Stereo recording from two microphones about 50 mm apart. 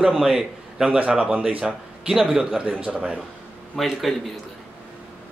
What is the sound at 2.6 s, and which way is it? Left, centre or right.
Speech, right.